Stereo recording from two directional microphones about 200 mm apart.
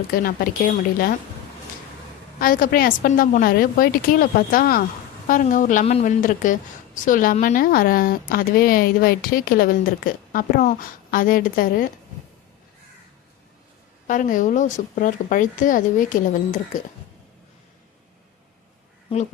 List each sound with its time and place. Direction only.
0.1 s a woman's voice: 45° left (ahead or behind)
2.4 s a woman's voice: 45° left (ahead or behind)
14.1 s speech: 40° left (ahead or behind)